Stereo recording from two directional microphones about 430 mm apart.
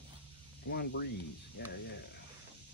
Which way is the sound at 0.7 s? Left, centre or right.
Left.